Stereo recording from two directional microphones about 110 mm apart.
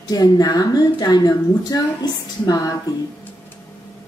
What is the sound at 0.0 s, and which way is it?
A woman's voice, 35° left (ahead or behind).